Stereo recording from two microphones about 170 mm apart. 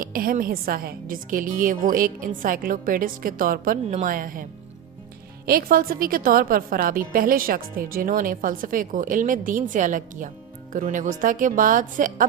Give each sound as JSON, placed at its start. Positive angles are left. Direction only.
{"t": 0.0, "sound": "a woman's voice", "side_deg": -55}
{"t": 5.5, "sound": "a woman's voice", "side_deg": -60}